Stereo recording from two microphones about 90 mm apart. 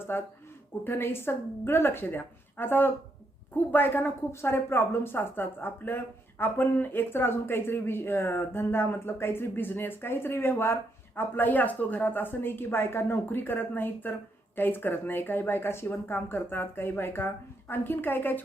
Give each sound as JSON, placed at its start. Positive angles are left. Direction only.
{"t": 0.1, "sound": "speech", "side_deg": 25}